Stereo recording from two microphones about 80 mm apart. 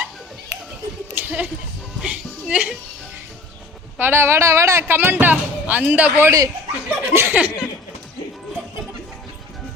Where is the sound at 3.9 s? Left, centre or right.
Right.